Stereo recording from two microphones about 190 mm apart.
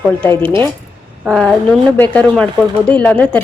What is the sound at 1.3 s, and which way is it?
A woman's voice, centre (ahead or behind).